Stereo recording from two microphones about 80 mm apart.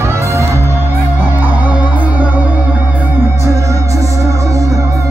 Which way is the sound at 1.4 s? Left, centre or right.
Centre.